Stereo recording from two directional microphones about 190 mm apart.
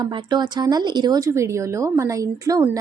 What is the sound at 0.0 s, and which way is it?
Speech, 20° right (ahead or behind).